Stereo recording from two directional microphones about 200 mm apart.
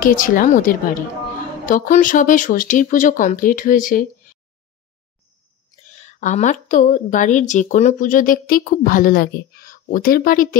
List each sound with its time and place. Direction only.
0.0 s a woman's voice: 45° left (ahead or behind)
5.9 s a woman's voice: 35° left (ahead or behind)